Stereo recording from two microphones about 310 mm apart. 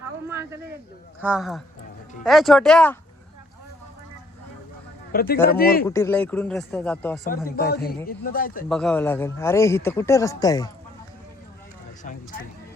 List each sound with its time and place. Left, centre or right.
0.3 s a sound: centre
1.2 s speech: centre
5.1 s a man's voice: left
5.8 s speech: centre
7.3 s a man's voice: left
8.7 s speech: centre